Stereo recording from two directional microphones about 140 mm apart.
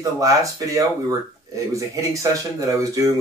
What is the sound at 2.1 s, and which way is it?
Speech, 25° right (ahead or behind).